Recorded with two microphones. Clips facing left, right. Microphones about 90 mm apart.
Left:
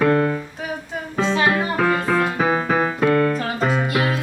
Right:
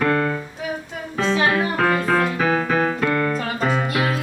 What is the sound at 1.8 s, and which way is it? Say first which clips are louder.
Keyboard: even; 5° left (ahead or behind).